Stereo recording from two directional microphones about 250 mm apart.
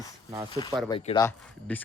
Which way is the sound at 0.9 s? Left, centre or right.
Left.